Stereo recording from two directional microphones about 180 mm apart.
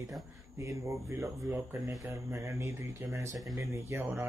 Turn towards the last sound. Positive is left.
turn(degrees=-15)  # may be behind; listen again after turning